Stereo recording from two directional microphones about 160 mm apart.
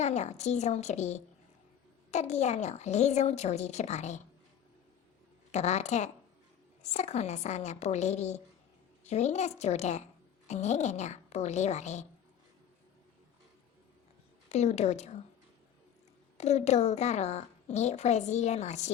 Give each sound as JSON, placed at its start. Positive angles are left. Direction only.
{"t": 0.0, "sound": "a woman's voice", "side_deg": 45}
{"t": 5.5, "sound": "a woman's voice", "side_deg": 45}
{"t": 14.5, "sound": "a woman's voice", "side_deg": 45}
{"t": 16.4, "sound": "a woman's voice", "side_deg": 45}